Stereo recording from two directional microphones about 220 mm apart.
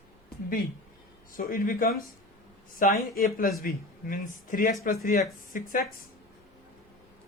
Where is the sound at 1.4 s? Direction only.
40° left (ahead or behind).